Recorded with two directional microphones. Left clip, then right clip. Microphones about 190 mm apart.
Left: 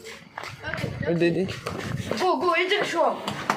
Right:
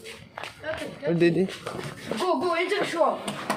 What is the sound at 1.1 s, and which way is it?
Speech, 25° right (ahead or behind).